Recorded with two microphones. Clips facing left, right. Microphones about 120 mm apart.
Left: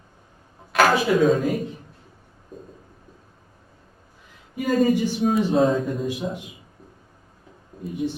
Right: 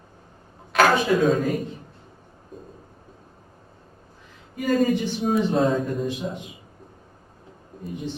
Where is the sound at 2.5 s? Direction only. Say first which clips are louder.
Left 1 dB; 40° left (ahead or behind).